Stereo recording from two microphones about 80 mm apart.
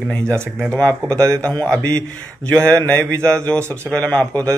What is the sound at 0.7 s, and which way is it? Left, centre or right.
Speech, centre.